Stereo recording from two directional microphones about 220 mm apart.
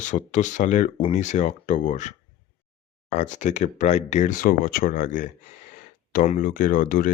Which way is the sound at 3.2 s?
35° left (ahead or behind).